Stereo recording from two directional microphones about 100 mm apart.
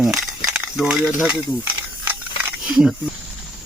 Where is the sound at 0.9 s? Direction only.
5° right (ahead or behind).